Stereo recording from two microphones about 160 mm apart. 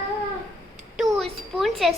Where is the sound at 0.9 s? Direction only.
Centre (ahead or behind).